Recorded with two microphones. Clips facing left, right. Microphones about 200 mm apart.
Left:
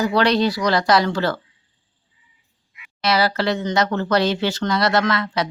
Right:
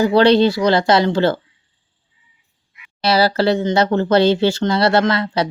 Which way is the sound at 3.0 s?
30° right (ahead or behind).